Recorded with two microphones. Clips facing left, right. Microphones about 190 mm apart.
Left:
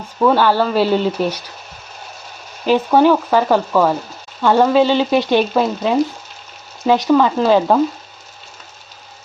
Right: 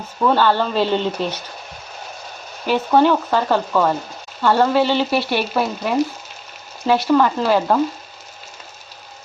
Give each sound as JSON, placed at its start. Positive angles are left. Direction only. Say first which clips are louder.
{"t": 0.3, "sound": "frying", "louder": "left 3 dB", "side_deg": 10}
{"t": 2.6, "sound": "frying", "louder": "left 3 dB", "side_deg": 10}